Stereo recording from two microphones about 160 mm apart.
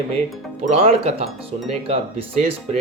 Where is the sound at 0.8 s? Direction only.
40° right (ahead or behind).